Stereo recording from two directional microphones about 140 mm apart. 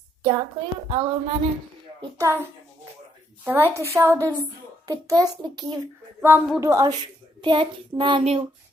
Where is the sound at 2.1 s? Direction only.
20° right (ahead or behind).